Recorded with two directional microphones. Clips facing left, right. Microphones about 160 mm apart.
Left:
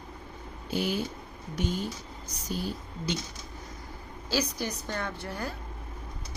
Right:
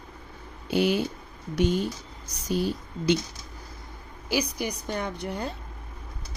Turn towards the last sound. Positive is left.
turn(degrees=-20)  # may be behind; listen again after turning